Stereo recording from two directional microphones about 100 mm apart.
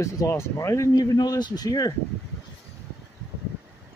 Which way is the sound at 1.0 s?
40° left (ahead or behind).